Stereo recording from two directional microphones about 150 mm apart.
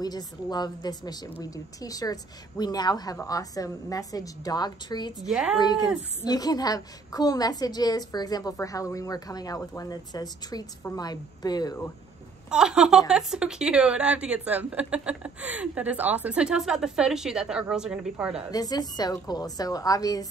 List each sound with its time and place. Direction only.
0.0 s a woman's voice: 25° left (ahead or behind)
5.3 s speech: 5° right (ahead or behind)
5.6 s a woman's voice: 30° left (ahead or behind)
12.4 s a woman's voice: 5° right (ahead or behind)
18.5 s a woman's voice: 25° left (ahead or behind)